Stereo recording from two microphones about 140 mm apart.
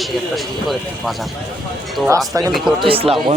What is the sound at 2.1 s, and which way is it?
Speech, 25° right (ahead or behind).